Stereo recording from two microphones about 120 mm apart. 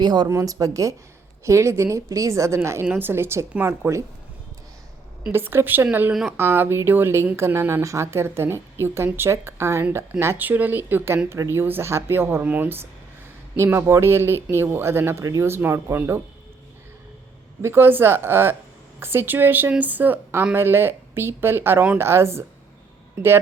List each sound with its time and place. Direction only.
0.0 s speech: 35° right (ahead or behind)
5.3 s a woman's voice: 20° right (ahead or behind)
17.6 s a woman's voice: 20° right (ahead or behind)